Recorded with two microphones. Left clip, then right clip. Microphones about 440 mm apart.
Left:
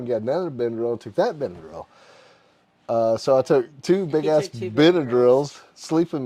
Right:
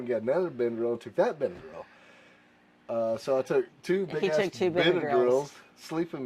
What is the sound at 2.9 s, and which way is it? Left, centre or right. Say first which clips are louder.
Speech: left 9 dB; left.